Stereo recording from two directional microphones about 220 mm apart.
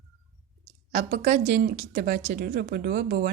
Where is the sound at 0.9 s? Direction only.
40° right (ahead or behind).